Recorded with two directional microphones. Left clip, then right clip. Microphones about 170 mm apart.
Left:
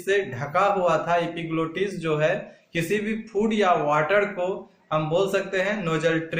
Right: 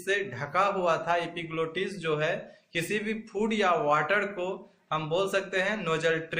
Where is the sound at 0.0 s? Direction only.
15° right (ahead or behind).